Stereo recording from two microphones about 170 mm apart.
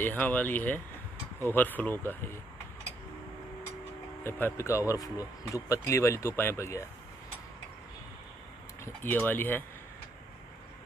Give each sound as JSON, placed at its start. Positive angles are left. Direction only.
{"t": 0.0, "sound": "speech", "side_deg": 10}
{"t": 4.2, "sound": "speech", "side_deg": 15}
{"t": 8.8, "sound": "speech", "side_deg": 10}